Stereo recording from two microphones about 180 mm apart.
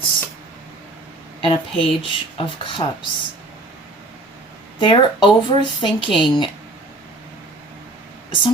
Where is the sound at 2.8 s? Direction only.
25° left (ahead or behind).